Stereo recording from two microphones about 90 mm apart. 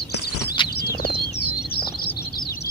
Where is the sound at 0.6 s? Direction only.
65° left (ahead or behind).